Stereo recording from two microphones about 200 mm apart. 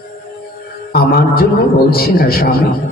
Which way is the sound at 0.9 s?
50° left (ahead or behind).